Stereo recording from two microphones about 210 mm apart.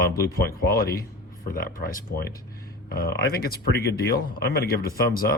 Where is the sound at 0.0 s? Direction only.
50° left (ahead or behind).